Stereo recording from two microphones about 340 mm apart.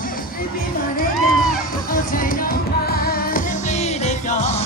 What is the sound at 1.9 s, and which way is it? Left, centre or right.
Music, left.